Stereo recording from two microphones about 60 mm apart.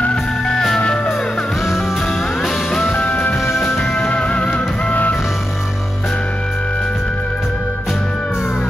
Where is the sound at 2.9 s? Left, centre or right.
Left.